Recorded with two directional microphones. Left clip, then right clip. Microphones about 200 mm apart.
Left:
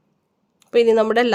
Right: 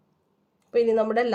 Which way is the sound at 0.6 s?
50° left (ahead or behind).